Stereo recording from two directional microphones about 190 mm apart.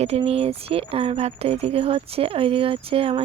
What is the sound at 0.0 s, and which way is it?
Speech, 30° right (ahead or behind).